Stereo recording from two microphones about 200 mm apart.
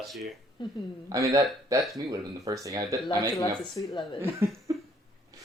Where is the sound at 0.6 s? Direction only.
25° left (ahead or behind).